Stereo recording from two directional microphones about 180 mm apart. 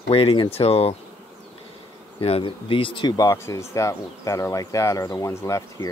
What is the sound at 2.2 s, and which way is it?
Speech, 30° left (ahead or behind).